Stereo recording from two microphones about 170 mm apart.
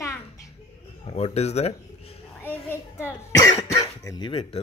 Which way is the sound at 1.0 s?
40° left (ahead or behind).